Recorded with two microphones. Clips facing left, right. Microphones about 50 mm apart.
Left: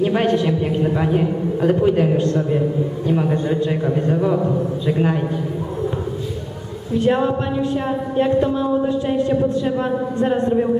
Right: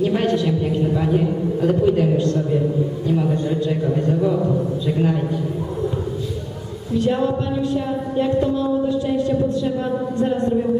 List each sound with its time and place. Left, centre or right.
0.0 s a man's voice: left
7.0 s speech: left